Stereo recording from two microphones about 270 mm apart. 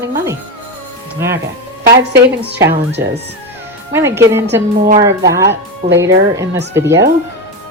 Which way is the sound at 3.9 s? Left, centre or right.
Centre.